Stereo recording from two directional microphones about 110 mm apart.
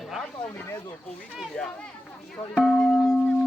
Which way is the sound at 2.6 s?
5° left (ahead or behind).